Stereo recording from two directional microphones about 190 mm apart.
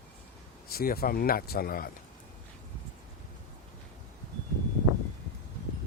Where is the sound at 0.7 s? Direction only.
50° left (ahead or behind).